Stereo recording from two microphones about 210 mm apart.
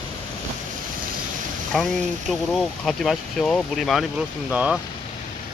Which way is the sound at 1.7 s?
Centre (ahead or behind).